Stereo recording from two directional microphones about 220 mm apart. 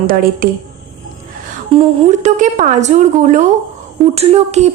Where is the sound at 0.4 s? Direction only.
40° right (ahead or behind).